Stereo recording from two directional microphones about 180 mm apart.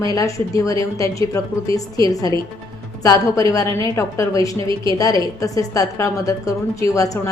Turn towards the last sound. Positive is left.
turn(degrees=20)  # may be behind; listen again after turning